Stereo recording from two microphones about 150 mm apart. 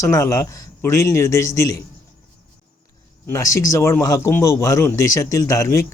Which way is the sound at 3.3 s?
20° left (ahead or behind).